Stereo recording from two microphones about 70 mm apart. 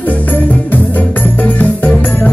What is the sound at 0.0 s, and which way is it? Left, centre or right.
Music, left.